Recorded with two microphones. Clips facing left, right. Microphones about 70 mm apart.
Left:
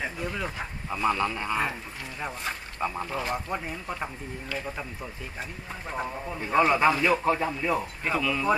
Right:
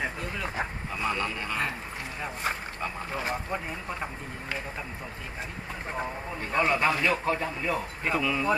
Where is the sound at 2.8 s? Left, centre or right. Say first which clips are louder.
Left 3 dB; centre.